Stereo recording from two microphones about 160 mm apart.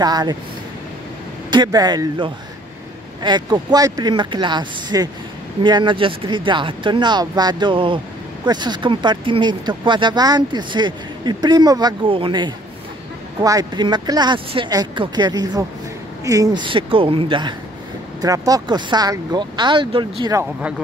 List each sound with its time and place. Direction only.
0.0 s speech: 25° right (ahead or behind)
1.5 s speech: 25° right (ahead or behind)